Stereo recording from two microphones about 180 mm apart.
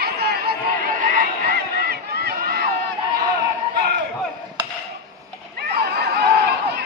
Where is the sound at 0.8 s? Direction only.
50° right (ahead or behind).